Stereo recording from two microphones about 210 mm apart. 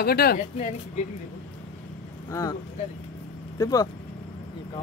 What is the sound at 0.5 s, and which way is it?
Speech, 35° left (ahead or behind).